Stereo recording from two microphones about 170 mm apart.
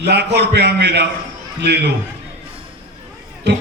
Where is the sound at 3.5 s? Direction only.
80° right.